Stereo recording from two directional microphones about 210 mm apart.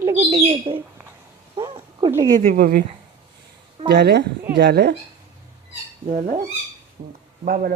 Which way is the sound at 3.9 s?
55° right (ahead or behind).